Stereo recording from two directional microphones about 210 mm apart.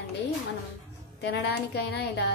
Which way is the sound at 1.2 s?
55° left (ahead or behind).